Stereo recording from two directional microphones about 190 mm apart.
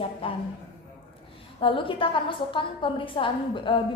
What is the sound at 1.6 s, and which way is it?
A woman's voice, 25° left (ahead or behind).